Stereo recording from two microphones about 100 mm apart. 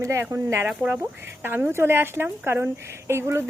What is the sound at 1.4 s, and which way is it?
A woman's voice, 20° right (ahead or behind).